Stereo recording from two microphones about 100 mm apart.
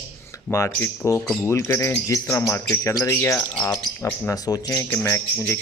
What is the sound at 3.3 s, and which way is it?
Speech, 10° left (ahead or behind).